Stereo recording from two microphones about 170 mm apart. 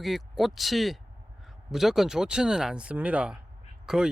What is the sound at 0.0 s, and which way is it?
Speech, centre (ahead or behind).